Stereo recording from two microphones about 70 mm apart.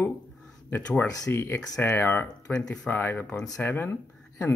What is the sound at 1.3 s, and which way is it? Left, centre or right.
Speech, left.